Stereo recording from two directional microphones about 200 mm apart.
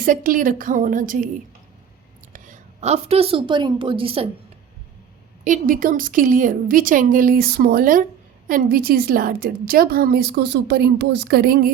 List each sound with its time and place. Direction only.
0.0 s a woman's voice: 45° right (ahead or behind)
2.3 s a woman's voice: 35° right (ahead or behind)
5.5 s a woman's voice: 45° right (ahead or behind)